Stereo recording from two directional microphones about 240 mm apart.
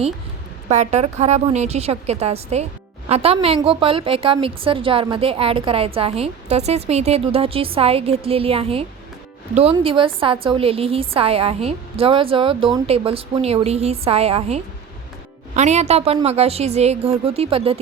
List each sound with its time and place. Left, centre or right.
0.7 s a woman's voice: right